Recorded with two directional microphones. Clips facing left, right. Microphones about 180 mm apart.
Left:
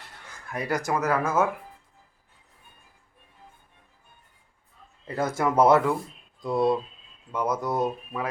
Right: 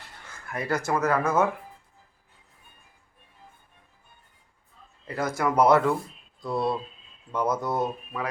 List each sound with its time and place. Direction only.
0.5 s speech: 15° left (ahead or behind)
5.0 s speech: 25° left (ahead or behind)